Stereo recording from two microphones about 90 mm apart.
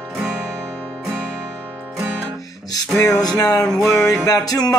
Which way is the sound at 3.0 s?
45° left (ahead or behind).